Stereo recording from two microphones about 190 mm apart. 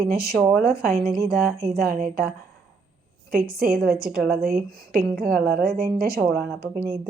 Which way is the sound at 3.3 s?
50° right (ahead or behind).